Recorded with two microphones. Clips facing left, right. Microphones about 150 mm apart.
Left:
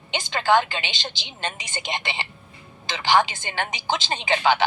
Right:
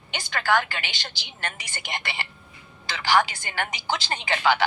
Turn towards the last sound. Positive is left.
turn(degrees=20)  # may be behind; listen again after turning